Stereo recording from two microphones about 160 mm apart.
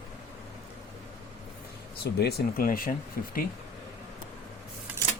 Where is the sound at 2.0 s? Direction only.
90° left; by 2.9 s 65° left (ahead or behind).